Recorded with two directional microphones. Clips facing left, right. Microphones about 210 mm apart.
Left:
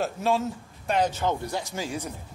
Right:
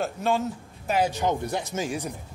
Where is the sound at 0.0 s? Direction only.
Centre (ahead or behind); by 2.1 s 15° right (ahead or behind).